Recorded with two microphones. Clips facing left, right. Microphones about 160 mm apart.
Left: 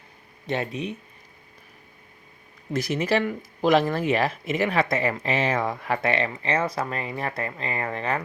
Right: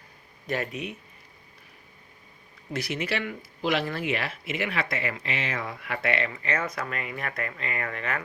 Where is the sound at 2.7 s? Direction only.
40° left (ahead or behind).